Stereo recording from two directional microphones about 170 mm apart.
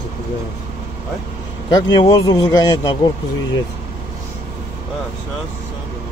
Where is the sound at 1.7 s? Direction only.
25° left (ahead or behind).